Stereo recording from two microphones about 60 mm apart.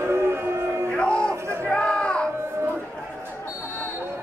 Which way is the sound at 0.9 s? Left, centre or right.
Centre.